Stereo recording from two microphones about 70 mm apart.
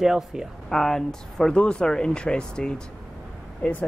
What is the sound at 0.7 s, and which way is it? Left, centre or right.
Speech, centre.